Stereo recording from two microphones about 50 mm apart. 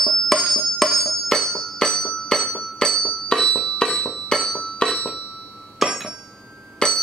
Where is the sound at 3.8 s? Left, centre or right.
Centre.